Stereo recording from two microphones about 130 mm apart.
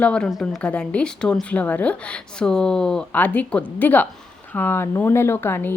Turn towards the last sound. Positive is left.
turn(degrees=20)  # may be behind; listen again after turning